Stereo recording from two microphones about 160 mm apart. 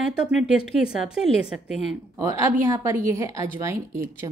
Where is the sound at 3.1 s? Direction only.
20° right (ahead or behind).